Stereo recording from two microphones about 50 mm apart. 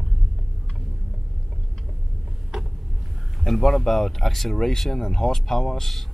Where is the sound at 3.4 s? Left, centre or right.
Centre.